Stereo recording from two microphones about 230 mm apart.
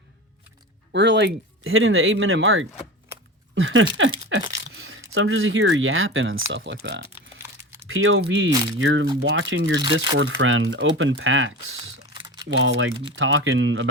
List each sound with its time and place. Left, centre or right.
0.9 s speech: right